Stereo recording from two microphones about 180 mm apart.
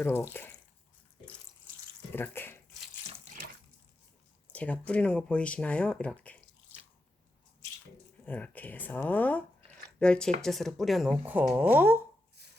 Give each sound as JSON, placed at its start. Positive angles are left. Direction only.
{"t": 0.0, "sound": "speech", "side_deg": 15}
{"t": 2.1, "sound": "speech", "side_deg": 10}
{"t": 4.5, "sound": "speech", "side_deg": 5}
{"t": 8.2, "sound": "speech", "side_deg": 10}
{"t": 12.4, "sound": "a sound", "side_deg": -65}